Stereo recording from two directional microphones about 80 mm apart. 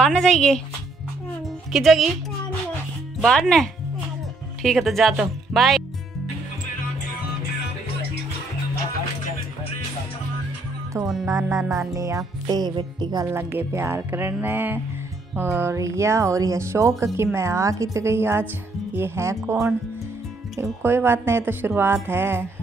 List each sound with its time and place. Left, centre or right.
0.0 s speech: centre
1.7 s speech: centre
3.2 s speech: centre
10.9 s speech: right
11.7 s music: right
12.7 s music: right
13.2 s speech: right
20.8 s speech: right